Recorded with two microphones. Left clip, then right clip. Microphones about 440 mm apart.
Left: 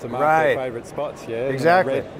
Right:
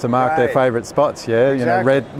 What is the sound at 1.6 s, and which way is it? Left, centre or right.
Speech, left.